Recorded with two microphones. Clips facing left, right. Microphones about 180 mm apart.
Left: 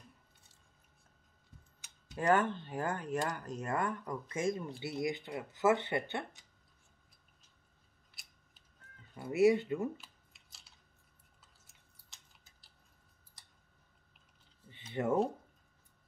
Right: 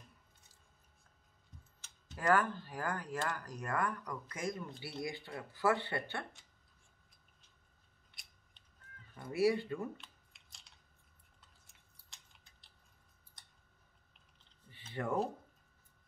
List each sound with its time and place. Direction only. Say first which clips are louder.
2.1 s speech: left 2 dB; 25° left (ahead or behind)
8.1 s scissors: left 1 dB; 5° left (ahead or behind)
9.1 s speech: left 5 dB; 20° left (ahead or behind)
9.9 s computer keyboard: left 1 dB; 5° left (ahead or behind)
11.6 s chewing: left 1 dB; centre (ahead or behind)
13.4 s a sound: even; 5° left (ahead or behind)
14.7 s a sound: left 5 dB; 20° left (ahead or behind)